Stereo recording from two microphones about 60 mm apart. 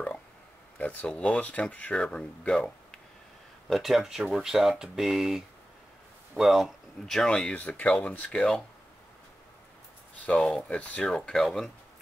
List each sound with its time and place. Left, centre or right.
0.7 s speech: left; by 6.7 s centre
7.1 s speech: centre
7.5 s speech: left
8.4 s speech: centre
10.4 s speech: centre